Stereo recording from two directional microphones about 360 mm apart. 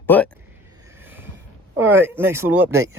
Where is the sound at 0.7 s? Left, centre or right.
Centre.